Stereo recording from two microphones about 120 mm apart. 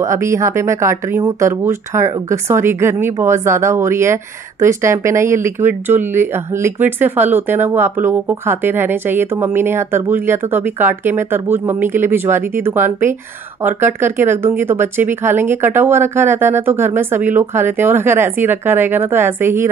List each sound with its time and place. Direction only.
0.0 s speech: 25° right (ahead or behind)